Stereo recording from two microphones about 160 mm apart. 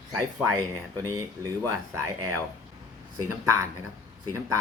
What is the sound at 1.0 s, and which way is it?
Speech, 20° right (ahead or behind).